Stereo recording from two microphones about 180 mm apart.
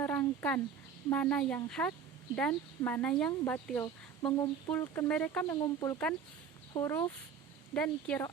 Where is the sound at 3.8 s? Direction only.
20° left (ahead or behind).